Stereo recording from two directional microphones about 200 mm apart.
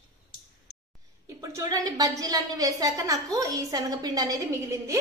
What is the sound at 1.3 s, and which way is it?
A woman's voice, 15° right (ahead or behind).